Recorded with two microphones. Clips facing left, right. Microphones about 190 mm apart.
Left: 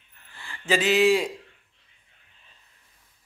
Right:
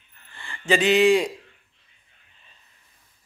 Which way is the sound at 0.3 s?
5° left (ahead or behind).